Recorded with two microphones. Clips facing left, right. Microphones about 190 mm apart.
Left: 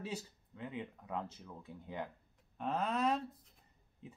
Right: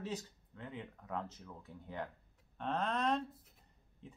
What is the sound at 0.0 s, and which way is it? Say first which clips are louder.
Speech: right 1 dB; 10° left (ahead or behind).